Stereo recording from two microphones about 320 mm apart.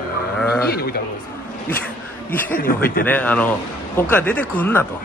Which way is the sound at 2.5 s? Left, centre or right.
Left.